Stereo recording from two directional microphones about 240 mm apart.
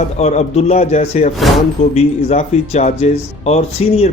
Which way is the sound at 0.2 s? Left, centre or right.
Left.